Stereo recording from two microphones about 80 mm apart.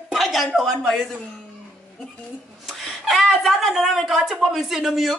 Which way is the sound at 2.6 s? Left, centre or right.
Centre.